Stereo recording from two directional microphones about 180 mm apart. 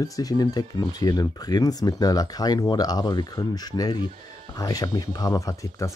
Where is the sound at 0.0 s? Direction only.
20° left (ahead or behind).